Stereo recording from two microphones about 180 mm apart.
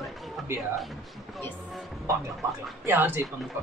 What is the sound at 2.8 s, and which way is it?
Speech, 10° right (ahead or behind).